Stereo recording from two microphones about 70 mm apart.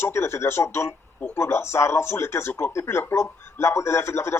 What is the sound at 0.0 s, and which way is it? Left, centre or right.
A man's voice, left.